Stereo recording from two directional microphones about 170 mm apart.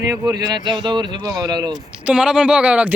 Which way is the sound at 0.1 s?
25° right (ahead or behind).